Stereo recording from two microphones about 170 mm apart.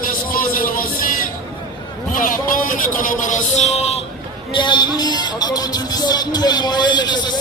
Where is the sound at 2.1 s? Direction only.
55° left (ahead or behind).